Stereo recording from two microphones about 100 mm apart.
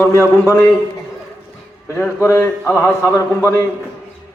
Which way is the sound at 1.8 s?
25° left (ahead or behind).